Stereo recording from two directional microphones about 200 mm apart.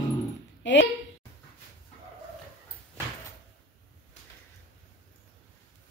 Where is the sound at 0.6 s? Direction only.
65° left (ahead or behind).